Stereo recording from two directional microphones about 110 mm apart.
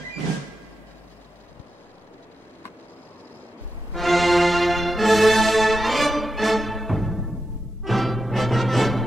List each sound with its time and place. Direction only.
3.9 s music: centre (ahead or behind)